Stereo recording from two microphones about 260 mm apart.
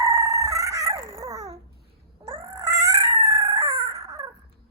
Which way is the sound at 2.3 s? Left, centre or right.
Centre.